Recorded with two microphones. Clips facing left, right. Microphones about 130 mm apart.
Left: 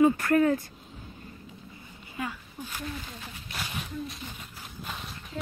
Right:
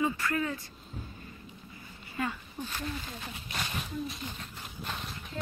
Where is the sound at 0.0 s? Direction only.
55° left (ahead or behind).